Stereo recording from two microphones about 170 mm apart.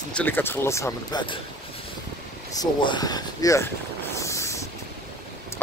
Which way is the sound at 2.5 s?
25° left (ahead or behind).